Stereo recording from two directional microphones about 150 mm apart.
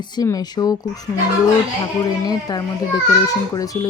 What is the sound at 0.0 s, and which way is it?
Speech, 25° left (ahead or behind).